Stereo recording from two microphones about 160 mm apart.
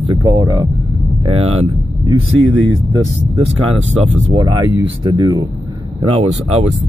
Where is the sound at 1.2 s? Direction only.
40° right (ahead or behind).